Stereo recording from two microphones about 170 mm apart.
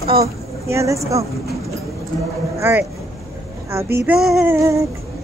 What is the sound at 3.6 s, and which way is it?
Child singing, 15° right (ahead or behind).